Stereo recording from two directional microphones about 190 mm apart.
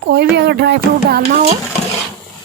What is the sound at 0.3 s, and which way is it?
Speech, 60° right (ahead or behind).